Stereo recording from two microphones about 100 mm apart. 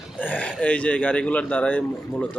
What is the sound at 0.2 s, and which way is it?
Speech, 15° left (ahead or behind).